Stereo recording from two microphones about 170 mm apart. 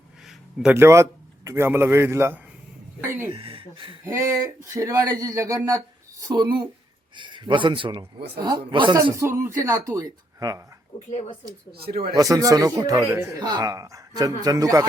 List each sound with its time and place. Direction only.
0.3 s a sound: 5° right (ahead or behind)
0.8 s a man's voice: 15° right (ahead or behind)
3.3 s speech: 30° right (ahead or behind)
4.0 s speech: 15° right (ahead or behind)
11.1 s a woman's voice: 35° left (ahead or behind)
11.7 s speech: 65° right (ahead or behind)
12.1 s speech: 20° right (ahead or behind)